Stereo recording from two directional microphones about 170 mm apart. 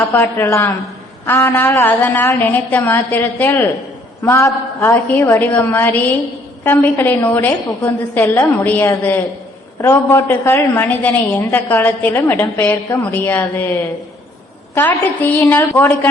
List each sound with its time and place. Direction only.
0.1 s a woman's voice: 15° left (ahead or behind)